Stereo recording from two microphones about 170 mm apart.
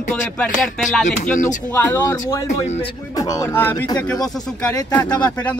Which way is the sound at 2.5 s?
40° left (ahead or behind).